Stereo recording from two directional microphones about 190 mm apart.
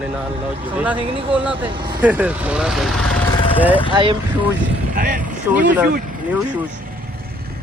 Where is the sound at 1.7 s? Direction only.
20° right (ahead or behind).